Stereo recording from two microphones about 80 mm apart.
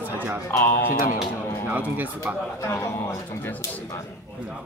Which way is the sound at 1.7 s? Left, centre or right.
Right.